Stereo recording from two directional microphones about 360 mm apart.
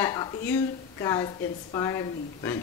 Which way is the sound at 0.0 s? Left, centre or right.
Centre.